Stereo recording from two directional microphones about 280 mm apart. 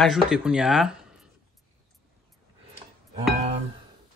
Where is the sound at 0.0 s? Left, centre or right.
Centre.